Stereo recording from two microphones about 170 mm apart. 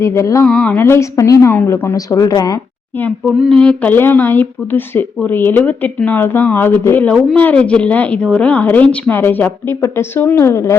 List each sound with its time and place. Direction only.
0.0 s speech: 15° left (ahead or behind)
0.4 s speech: 5° left (ahead or behind); by 2.6 s 20° left (ahead or behind)
3.2 s speech: centre (ahead or behind)